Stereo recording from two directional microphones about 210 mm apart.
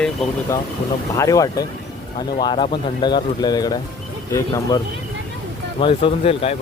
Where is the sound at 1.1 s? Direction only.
15° left (ahead or behind).